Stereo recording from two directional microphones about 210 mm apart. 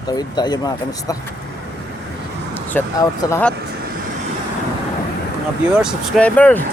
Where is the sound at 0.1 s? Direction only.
20° left (ahead or behind).